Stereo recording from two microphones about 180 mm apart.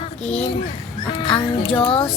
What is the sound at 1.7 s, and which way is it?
Speech, 30° left (ahead or behind).